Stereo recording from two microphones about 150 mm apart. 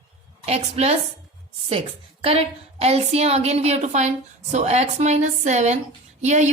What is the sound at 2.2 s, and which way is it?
A woman's voice, 40° right (ahead or behind).